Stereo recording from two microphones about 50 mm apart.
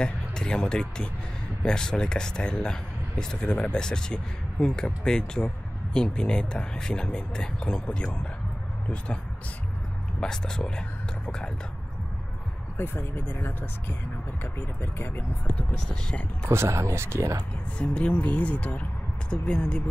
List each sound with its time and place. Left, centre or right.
0.0 s speech: centre
10.2 s speech: centre
12.7 s speech: left
16.4 s speech: right
17.7 s speech: left
19.3 s speech: centre